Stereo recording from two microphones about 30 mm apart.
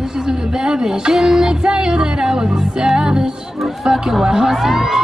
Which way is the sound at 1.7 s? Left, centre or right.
Right.